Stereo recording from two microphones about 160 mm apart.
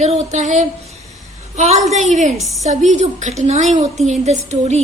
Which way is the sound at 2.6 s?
50° right (ahead or behind).